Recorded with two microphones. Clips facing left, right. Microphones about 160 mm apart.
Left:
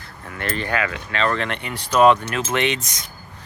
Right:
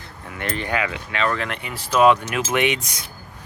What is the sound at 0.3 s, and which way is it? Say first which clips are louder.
Speech: left 1 dB; 15° right (ahead or behind).